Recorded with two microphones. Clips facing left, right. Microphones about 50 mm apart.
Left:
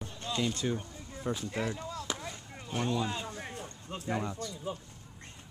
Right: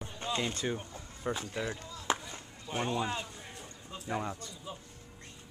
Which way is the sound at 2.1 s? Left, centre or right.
Right.